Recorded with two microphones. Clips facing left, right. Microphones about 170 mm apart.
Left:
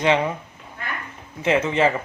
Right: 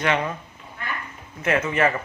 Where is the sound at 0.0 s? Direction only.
20° left (ahead or behind).